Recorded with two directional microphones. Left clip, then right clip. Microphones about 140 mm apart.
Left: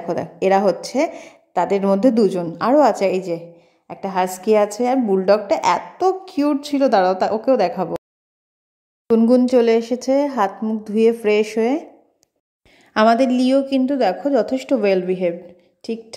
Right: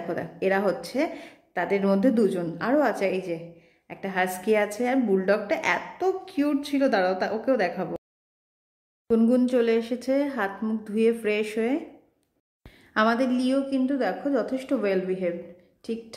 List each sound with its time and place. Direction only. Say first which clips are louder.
0.1 s a woman's voice: left 9 dB; 40° left (ahead or behind)
9.1 s a woman's voice: left 8 dB; 35° left (ahead or behind)
12.7 s a woman's voice: left 8 dB; 45° left (ahead or behind)